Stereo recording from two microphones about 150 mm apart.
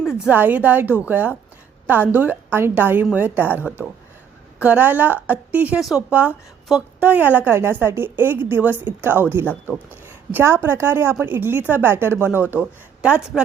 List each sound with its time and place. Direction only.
0.0 s a woman's voice: 5° right (ahead or behind)